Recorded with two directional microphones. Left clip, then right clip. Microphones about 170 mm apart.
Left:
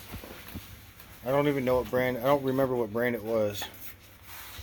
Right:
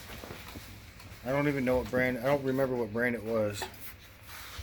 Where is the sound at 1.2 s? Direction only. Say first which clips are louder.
Left 4 dB; 40° left (ahead or behind).